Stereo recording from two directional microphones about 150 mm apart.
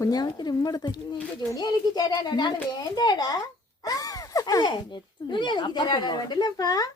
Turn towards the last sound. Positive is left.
turn(degrees=25)  # may be behind; listen again after turning